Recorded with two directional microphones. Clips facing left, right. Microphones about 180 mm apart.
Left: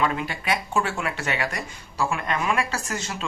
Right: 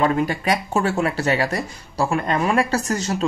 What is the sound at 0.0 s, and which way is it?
Speech, 40° right (ahead or behind).